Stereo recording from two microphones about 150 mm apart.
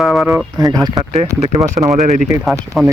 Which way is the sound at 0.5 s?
25° right (ahead or behind).